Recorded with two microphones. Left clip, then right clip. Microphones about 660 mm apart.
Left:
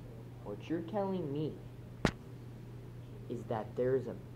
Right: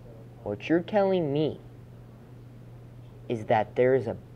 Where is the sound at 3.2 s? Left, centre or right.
Right.